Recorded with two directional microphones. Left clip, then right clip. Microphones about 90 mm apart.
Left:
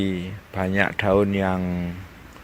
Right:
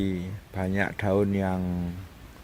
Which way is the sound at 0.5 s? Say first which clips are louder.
Left 7 dB; 20° right (ahead or behind).